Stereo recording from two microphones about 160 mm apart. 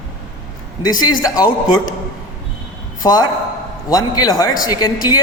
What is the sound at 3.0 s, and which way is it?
A man's voice, 25° left (ahead or behind).